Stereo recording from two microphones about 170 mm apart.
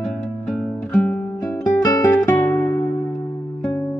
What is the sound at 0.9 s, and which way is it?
Music, 10° left (ahead or behind).